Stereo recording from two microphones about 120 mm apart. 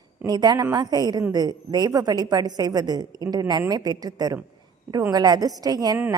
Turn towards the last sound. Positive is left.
turn(degrees=-30)  # may be behind; listen again after turning